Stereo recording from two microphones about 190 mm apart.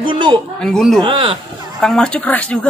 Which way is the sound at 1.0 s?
25° right (ahead or behind).